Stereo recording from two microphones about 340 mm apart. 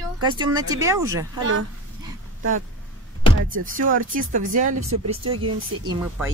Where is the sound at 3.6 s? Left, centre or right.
Right.